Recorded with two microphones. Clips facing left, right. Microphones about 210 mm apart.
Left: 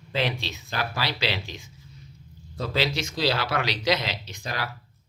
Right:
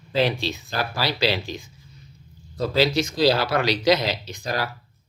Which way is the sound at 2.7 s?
40° right (ahead or behind).